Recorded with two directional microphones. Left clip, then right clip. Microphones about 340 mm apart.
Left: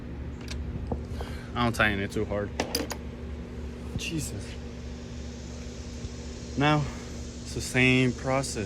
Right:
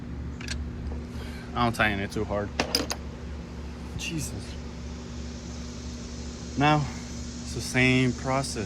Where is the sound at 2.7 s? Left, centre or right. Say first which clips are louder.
Right 3 dB; right.